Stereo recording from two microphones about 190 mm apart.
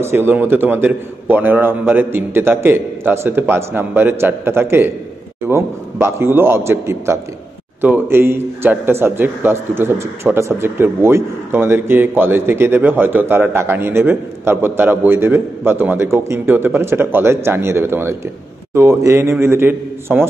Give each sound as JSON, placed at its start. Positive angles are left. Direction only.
{"t": 0.0, "sound": "a man's voice", "side_deg": -10}